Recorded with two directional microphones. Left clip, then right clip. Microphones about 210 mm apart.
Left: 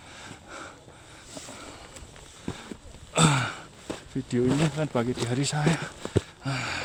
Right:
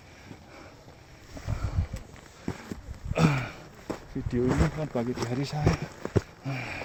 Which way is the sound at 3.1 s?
25° left (ahead or behind).